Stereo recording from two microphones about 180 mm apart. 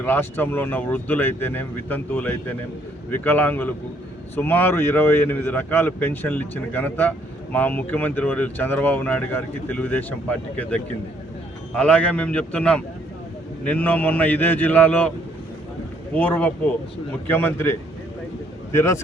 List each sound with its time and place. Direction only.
0.0 s speech: 10° left (ahead or behind)
16.1 s speech: 10° left (ahead or behind)